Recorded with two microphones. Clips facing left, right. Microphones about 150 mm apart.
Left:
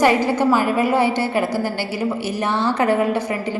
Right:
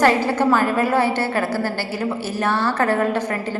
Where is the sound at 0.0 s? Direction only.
15° left (ahead or behind).